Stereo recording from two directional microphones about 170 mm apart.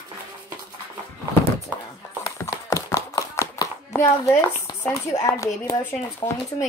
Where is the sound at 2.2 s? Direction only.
20° left (ahead or behind).